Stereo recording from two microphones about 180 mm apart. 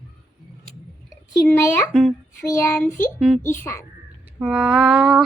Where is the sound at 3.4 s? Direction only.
15° left (ahead or behind).